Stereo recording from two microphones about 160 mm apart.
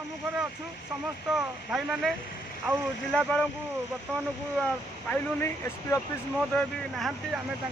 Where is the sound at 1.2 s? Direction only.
5° right (ahead or behind).